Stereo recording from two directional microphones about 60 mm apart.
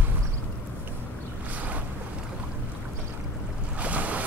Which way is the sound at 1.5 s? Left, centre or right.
Right.